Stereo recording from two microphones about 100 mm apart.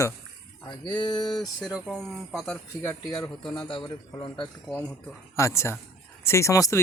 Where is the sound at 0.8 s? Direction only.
50° left (ahead or behind).